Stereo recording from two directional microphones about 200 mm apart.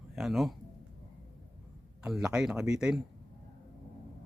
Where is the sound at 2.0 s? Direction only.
5° right (ahead or behind).